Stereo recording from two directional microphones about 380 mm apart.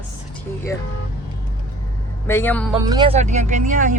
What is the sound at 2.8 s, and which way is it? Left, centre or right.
Speech, centre.